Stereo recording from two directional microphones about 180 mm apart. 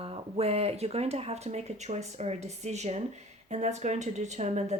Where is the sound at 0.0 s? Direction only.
35° right (ahead or behind).